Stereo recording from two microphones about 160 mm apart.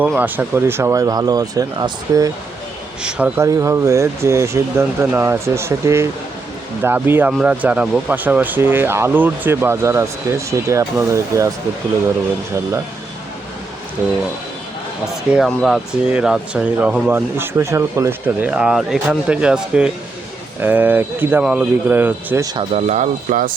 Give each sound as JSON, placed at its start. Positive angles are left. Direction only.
{"t": 0.2, "sound": "speech", "side_deg": -15}
{"t": 3.0, "sound": "speech", "side_deg": -5}
{"t": 15.0, "sound": "speech", "side_deg": -5}
{"t": 22.5, "sound": "speech", "side_deg": -40}